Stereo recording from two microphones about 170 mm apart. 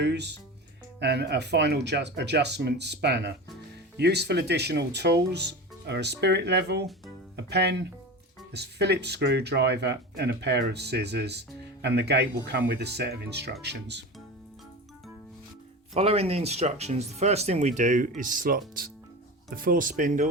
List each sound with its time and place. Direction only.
0.0 s speech: 80° right
16.0 s speech: 35° right (ahead or behind)